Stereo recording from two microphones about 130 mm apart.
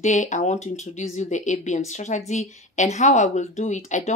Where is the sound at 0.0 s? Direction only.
65° left (ahead or behind).